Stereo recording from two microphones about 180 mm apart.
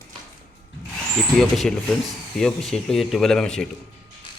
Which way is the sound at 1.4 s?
Centre (ahead or behind).